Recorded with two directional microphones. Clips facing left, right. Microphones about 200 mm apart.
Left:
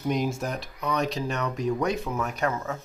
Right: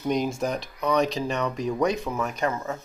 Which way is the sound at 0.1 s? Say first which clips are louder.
Right 3 dB; 5° left (ahead or behind).